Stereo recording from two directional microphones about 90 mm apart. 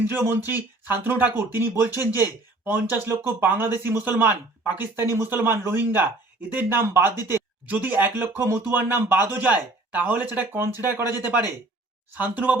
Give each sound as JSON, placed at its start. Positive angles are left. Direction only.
{"t": 0.0, "sound": "speech", "side_deg": -25}